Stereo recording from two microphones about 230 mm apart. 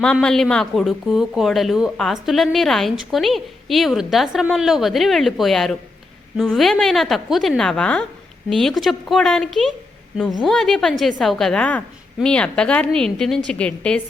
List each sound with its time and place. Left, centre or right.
0.0 s speech: centre